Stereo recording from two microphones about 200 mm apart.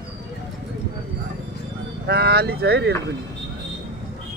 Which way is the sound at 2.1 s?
55° right (ahead or behind).